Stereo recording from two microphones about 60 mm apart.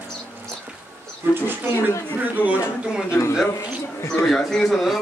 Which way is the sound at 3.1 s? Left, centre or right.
Left.